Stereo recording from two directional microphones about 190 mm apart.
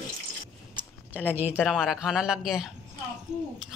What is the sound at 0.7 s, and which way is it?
Speech, 10° right (ahead or behind).